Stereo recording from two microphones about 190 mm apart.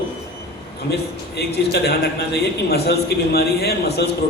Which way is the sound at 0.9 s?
60° left (ahead or behind).